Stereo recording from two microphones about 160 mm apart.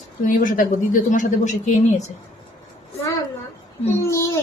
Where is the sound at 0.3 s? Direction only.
55° left (ahead or behind).